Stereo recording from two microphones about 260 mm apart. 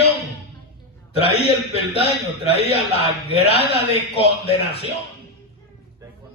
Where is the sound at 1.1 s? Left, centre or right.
Left.